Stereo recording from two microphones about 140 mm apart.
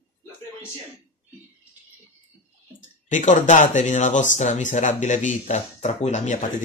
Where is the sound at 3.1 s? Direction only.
60° left (ahead or behind).